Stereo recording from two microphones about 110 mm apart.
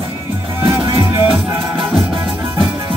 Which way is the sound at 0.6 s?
25° right (ahead or behind).